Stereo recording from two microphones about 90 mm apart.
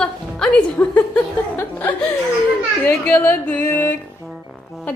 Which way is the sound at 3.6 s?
20° left (ahead or behind).